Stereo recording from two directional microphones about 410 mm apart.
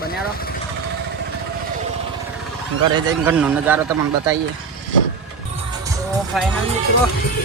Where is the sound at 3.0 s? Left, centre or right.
Centre.